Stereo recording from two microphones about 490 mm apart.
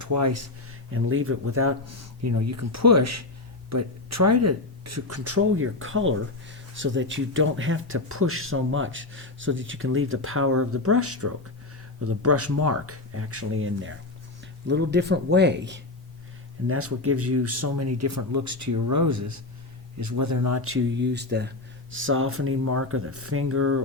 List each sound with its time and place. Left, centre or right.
0.0 s speech: right